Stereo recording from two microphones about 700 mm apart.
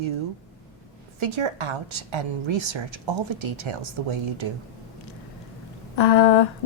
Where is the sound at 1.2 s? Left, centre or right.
Right.